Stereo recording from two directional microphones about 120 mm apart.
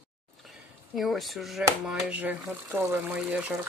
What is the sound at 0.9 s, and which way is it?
Speech, centre (ahead or behind).